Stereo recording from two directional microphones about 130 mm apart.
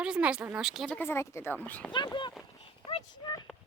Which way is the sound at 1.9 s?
35° left (ahead or behind).